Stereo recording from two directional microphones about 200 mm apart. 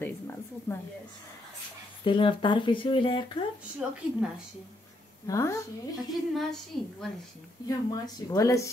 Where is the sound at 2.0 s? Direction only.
25° left (ahead or behind).